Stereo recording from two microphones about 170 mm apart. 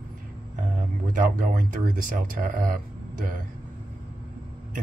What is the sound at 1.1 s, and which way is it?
Speech, 50° right (ahead or behind).